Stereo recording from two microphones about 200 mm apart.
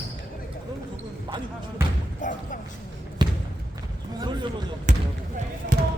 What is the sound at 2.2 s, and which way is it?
Music, 40° left (ahead or behind).